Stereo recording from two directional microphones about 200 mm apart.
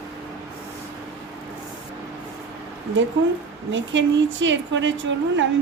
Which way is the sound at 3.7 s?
65° right (ahead or behind).